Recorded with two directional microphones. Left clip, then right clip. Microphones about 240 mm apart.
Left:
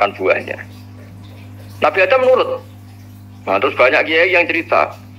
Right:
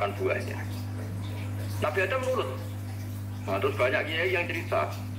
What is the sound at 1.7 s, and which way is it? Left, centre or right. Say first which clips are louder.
A man's voice: left 15 dB; left.